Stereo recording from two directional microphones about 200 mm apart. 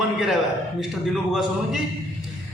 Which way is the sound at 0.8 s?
Centre (ahead or behind).